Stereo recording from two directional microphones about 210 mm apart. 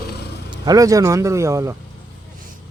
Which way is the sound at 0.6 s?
15° right (ahead or behind).